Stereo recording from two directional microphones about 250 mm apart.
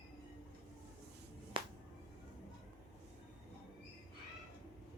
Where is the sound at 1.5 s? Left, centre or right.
Centre.